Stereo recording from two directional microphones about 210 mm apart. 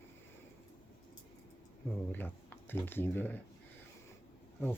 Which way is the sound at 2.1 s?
10° left (ahead or behind).